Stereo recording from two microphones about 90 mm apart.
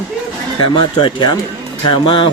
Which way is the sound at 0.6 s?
60° left (ahead or behind).